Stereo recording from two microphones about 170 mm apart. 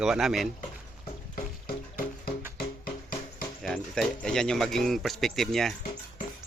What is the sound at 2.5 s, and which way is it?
Music, 60° left (ahead or behind).